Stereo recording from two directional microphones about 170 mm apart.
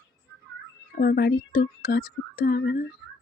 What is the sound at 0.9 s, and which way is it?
Speech, 65° left (ahead or behind).